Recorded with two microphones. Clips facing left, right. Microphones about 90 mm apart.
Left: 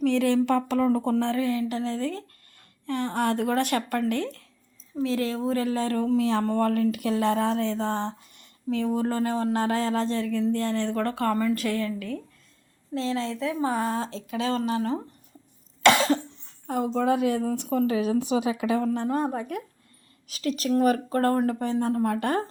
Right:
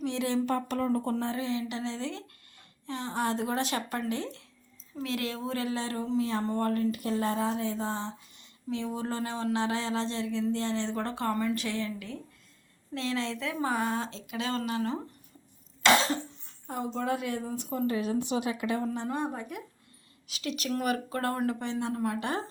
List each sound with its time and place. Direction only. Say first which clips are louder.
0.0 s speech: left 7 dB; 60° left (ahead or behind)
2.8 s speech: left 6 dB; 55° left (ahead or behind)
5.0 s speech: left 7 dB; 35° left (ahead or behind)
6.1 s a woman's voice: left 3 dB; 75° left (ahead or behind); by 12.2 s 55° left (ahead or behind)
12.9 s speech: left 4 dB; 35° left (ahead or behind)
16.6 s a woman's voice: left 7 dB; 75° left (ahead or behind); by 18.8 s 90° left
19.1 s a woman's voice: left 6 dB; 45° left (ahead or behind)